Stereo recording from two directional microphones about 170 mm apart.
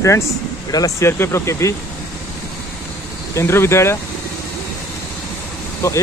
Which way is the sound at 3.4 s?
15° left (ahead or behind).